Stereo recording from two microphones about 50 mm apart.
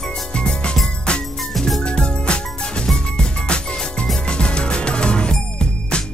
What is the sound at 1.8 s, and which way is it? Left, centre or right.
Music, centre.